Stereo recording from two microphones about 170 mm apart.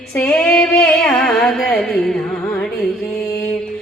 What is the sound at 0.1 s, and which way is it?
Music, 10° left (ahead or behind).